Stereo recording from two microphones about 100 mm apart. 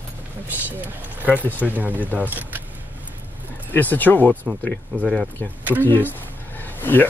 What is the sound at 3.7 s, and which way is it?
Speech, 20° left (ahead or behind).